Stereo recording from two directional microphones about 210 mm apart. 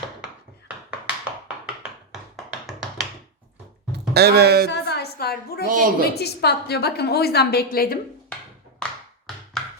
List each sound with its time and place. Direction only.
2.3 s tap: centre (ahead or behind)
3.9 s speech: 50° right (ahead or behind)
4.7 s a sound: 50° left (ahead or behind)
5.6 s a woman's voice: 40° right (ahead or behind)
6.1 s a woman's voice: 50° left (ahead or behind)
8.3 s tap: 5° left (ahead or behind)